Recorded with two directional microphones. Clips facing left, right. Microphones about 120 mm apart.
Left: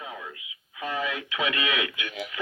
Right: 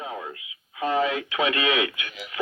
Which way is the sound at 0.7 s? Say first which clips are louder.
Right 7 dB; 30° right (ahead or behind).